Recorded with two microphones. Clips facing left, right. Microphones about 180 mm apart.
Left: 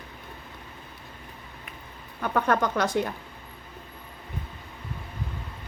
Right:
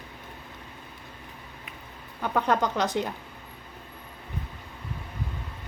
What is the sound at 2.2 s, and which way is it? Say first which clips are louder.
Speech: left 1 dB; 15° right (ahead or behind).